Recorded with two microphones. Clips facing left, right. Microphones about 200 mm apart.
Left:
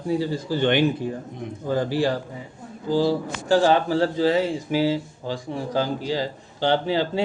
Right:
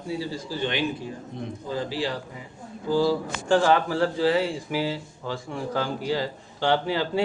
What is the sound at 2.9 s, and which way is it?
Speech, 35° left (ahead or behind).